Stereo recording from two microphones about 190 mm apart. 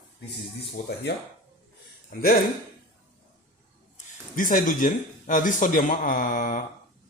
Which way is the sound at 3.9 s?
45° left (ahead or behind).